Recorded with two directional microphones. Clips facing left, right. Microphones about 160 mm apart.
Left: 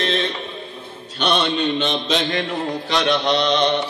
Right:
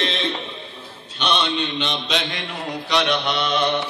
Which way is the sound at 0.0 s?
45° left (ahead or behind).